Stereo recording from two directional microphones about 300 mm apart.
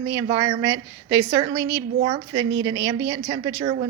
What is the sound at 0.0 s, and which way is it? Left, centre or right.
A woman's voice, centre.